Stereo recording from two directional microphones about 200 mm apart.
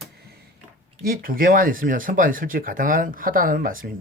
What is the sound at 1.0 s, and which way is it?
Speech, 45° right (ahead or behind).